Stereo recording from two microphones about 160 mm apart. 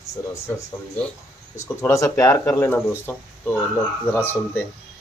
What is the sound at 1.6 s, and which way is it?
Speech, 15° left (ahead or behind).